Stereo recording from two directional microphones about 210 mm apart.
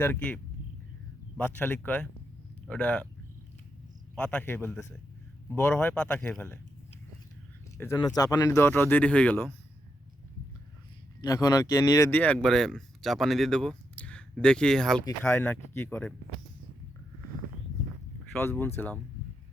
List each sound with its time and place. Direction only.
0.0 s speech: 10° left (ahead or behind)
1.4 s speech: 5° left (ahead or behind)
4.2 s speech: 5° left (ahead or behind)
7.8 s speech: 15° left (ahead or behind)
11.2 s speech: 15° left (ahead or behind)
18.3 s speech: 10° left (ahead or behind)